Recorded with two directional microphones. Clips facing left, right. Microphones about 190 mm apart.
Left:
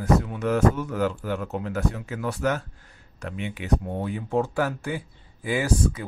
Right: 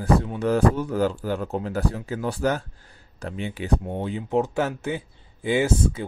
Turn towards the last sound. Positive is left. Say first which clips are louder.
# right 2 dB
turn(degrees=-25)  # may be behind; listen again after turning